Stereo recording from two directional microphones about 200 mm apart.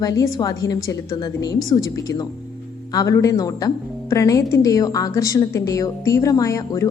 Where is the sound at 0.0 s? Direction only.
15° left (ahead or behind).